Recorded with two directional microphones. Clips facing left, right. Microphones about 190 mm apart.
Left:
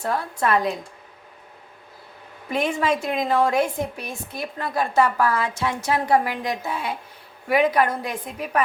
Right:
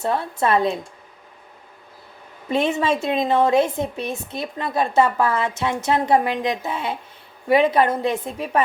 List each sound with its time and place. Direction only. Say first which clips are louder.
0.0 s a woman's voice: right 2 dB; 25° right (ahead or behind)
2.5 s a woman's voice: right 2 dB; 25° right (ahead or behind)